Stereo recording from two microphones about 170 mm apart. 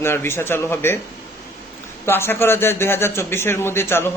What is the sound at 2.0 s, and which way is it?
A man's voice, 15° left (ahead or behind).